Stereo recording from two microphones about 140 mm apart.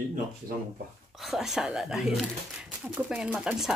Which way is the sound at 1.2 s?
Centre (ahead or behind).